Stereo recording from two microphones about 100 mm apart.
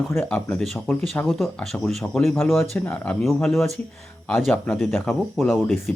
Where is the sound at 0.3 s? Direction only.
15° left (ahead or behind).